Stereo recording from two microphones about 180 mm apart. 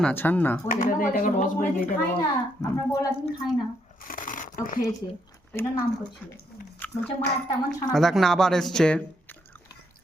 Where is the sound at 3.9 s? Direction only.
50° left (ahead or behind).